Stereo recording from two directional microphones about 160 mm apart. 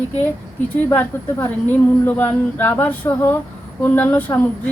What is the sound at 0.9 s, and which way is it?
A woman's voice, 10° left (ahead or behind).